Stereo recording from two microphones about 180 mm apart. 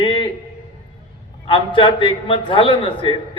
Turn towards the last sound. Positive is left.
turn(degrees=25)  # may be behind; listen again after turning